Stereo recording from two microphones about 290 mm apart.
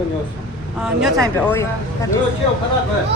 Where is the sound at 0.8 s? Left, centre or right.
Centre.